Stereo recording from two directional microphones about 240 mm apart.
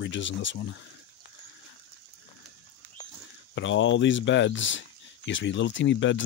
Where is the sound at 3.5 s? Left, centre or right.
Left.